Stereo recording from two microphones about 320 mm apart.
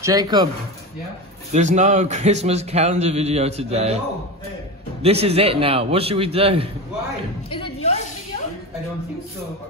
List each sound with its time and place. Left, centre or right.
0.0 s a man's voice: centre
1.5 s a man's voice: right
5.2 s a man's voice: centre
7.5 s a sound: centre